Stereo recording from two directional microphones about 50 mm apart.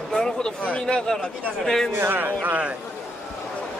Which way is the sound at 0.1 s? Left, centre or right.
Centre.